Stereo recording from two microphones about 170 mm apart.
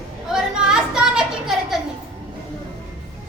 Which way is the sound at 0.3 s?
5° right (ahead or behind).